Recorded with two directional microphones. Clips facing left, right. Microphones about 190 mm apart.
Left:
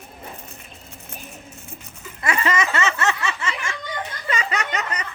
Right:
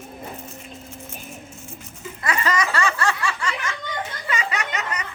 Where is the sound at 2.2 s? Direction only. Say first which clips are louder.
Left 1 dB; 25° left (ahead or behind).